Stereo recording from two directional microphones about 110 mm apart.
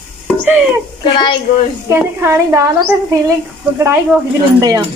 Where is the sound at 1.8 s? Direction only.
20° right (ahead or behind).